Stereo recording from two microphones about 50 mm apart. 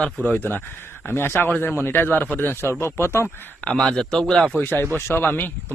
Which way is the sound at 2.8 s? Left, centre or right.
Left.